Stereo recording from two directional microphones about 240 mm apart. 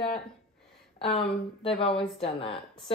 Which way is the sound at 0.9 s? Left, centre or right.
Left.